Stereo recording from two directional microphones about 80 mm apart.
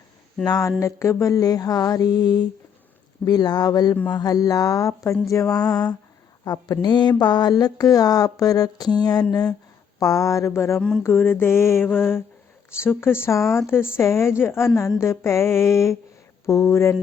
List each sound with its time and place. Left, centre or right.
0.8 s music: left
3.2 s a sound: left
4.1 s music: left
6.4 s a sound: left
10.0 s a woman's voice: left
10.8 s speech: centre
11.0 s mantra: left
13.0 s a woman's voice: left